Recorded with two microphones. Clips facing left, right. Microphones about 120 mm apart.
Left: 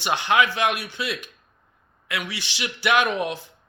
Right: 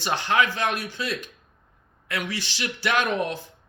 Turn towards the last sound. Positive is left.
turn(degrees=-40)  # may be behind; listen again after turning